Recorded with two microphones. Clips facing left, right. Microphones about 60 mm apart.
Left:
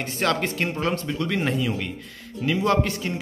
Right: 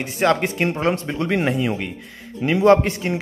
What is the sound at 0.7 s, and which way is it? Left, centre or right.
A man's voice, right.